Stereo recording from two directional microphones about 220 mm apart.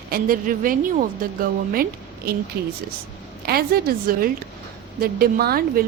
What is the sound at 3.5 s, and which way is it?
A woman's voice, 45° right (ahead or behind).